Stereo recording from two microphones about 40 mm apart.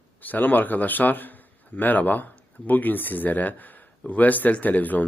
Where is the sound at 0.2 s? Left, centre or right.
Left.